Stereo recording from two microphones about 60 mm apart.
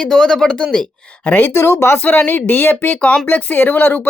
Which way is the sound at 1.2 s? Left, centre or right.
Left.